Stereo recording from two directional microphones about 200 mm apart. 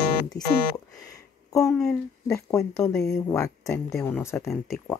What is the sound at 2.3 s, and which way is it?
A woman's voice, 15° left (ahead or behind).